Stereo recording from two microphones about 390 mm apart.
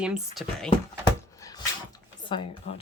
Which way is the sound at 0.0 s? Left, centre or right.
Centre.